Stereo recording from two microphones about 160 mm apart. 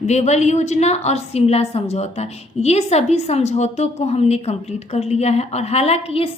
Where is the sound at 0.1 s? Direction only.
45° left (ahead or behind).